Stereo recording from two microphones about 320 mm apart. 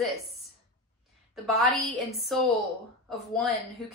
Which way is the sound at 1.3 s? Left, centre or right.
Centre.